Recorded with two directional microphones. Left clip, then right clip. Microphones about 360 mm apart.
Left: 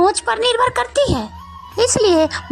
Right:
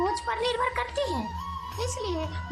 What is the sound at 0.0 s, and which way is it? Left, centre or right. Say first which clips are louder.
Speech: left 12 dB; centre.